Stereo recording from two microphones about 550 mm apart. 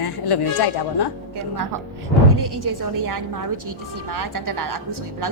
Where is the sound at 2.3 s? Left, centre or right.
Right.